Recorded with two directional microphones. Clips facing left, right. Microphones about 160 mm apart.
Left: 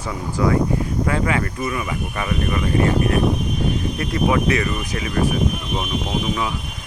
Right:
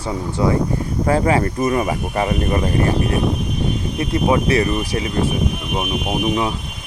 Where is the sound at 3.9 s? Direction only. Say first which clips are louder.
Right 4 dB; 25° right (ahead or behind).